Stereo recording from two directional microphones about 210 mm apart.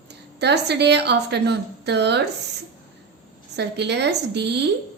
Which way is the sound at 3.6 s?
55° right (ahead or behind).